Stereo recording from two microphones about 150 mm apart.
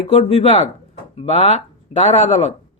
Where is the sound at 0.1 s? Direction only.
45° left (ahead or behind).